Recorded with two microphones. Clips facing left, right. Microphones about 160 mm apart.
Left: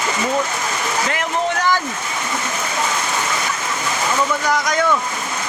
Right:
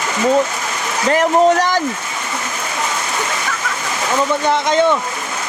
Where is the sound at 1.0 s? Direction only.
40° right (ahead or behind).